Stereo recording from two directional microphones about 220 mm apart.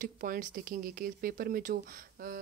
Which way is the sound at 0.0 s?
40° right (ahead or behind).